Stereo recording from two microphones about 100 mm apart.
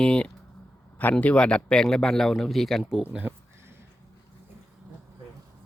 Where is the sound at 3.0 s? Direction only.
15° right (ahead or behind).